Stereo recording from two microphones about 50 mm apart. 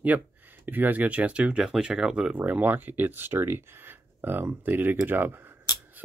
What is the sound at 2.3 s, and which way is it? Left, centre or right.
Speech, right.